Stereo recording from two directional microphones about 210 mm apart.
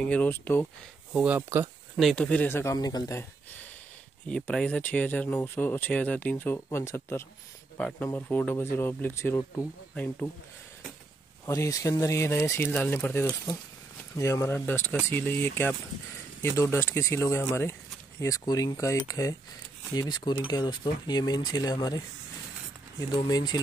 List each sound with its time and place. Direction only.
0.0 s speech: 5° left (ahead or behind)
1.1 s speech: 5° right (ahead or behind)
2.0 s speech: 5° left (ahead or behind)
4.3 s speech: 5° left (ahead or behind)
11.4 s speech: 15° left (ahead or behind)